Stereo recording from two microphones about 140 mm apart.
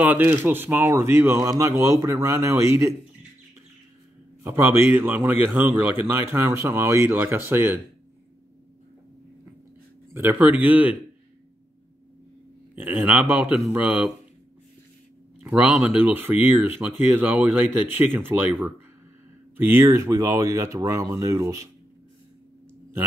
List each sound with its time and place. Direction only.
0.0 s speech: 15° right (ahead or behind)
4.4 s speech: 15° right (ahead or behind)
10.1 s speech: 15° right (ahead or behind)
12.7 s speech: 10° right (ahead or behind)
15.4 s speech: 10° right (ahead or behind)